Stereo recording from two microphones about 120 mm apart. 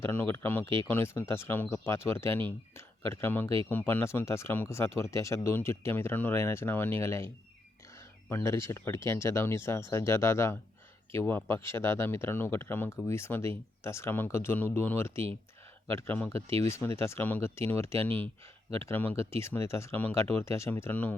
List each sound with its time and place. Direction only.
0.0 s speech: 20° left (ahead or behind)